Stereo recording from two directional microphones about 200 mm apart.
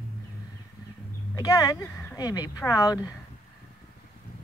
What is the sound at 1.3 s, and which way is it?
Speech, 20° left (ahead or behind).